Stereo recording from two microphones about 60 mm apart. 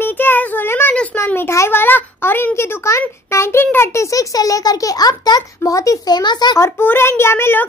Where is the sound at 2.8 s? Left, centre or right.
Left.